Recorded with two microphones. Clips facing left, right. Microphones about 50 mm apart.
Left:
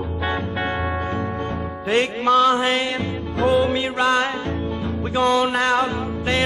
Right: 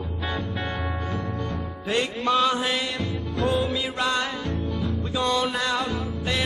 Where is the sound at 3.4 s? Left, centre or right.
Left.